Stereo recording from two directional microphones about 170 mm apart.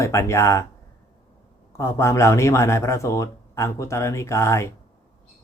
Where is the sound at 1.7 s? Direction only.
15° left (ahead or behind).